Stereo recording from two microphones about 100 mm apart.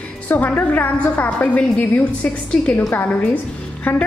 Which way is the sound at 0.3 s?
15° left (ahead or behind).